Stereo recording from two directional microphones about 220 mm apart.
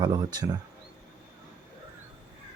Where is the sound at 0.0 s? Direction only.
20° right (ahead or behind).